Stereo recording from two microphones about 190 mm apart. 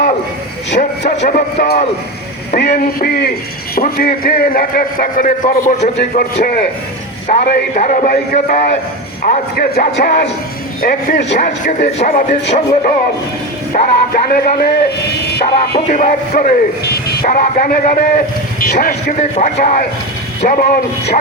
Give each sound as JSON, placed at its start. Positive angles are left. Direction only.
{"t": 0.8, "sound": "a man's voice", "side_deg": 60}
{"t": 1.2, "sound": "speech", "side_deg": 40}
{"t": 2.6, "sound": "a man's voice", "side_deg": 55}
{"t": 11.3, "sound": "speech", "side_deg": 40}
{"t": 13.7, "sound": "a man's voice", "side_deg": 50}
{"t": 15.9, "sound": "a man's voice", "side_deg": 40}